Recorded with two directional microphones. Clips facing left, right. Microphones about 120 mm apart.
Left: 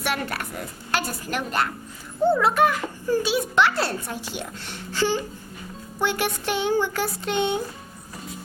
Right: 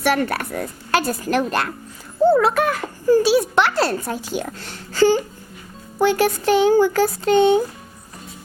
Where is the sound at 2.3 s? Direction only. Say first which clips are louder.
Right 2 dB; 90° right.